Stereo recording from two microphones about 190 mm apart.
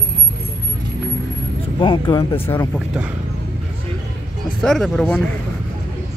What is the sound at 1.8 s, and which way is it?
Speech, 25° left (ahead or behind).